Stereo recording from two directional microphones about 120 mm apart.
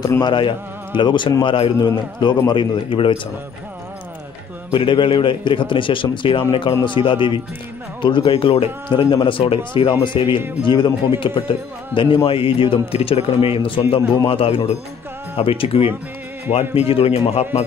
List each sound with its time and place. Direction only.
0.0 s speech: 35° left (ahead or behind)
4.7 s a man's voice: 45° left (ahead or behind); by 17.6 s 60° left (ahead or behind)